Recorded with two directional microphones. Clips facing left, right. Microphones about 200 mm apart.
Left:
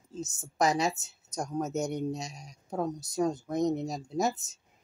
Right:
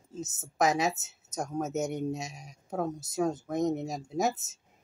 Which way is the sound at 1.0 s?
20° right (ahead or behind).